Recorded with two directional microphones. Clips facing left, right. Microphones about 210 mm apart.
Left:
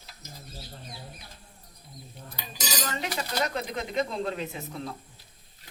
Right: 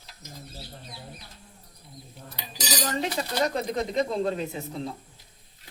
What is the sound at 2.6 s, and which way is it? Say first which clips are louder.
Speech: right 4 dB; 35° right (ahead or behind).